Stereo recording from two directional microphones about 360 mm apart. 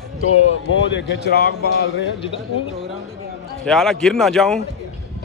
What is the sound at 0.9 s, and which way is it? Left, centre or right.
Speech, left.